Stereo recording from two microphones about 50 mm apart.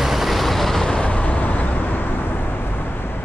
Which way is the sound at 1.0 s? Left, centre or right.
Left.